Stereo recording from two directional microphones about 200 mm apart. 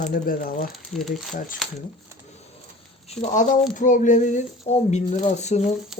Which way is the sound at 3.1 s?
35° left (ahead or behind).